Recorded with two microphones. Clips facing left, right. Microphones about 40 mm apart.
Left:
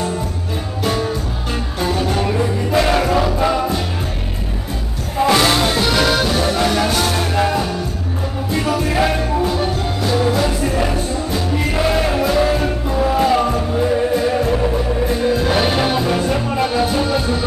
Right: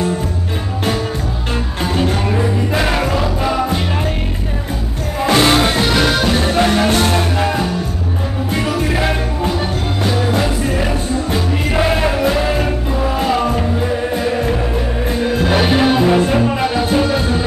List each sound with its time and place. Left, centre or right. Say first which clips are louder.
2.1 s music: right 1 dB; centre
5.2 s music: right 1 dB; centre
5.9 s music: right 1 dB; centre
6.3 s music: right 2 dB; right
6.9 s music: right 3 dB; right
7.3 s music: even; centre
9.5 s music: even; centre
16.0 s music: right 5 dB; right